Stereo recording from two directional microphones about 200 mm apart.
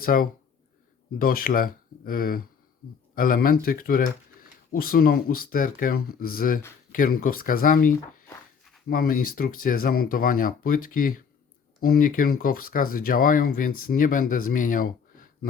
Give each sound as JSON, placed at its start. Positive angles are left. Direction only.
{"t": 0.0, "sound": "speech", "side_deg": 45}